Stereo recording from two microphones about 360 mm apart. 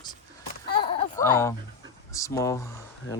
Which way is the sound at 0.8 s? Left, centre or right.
Centre.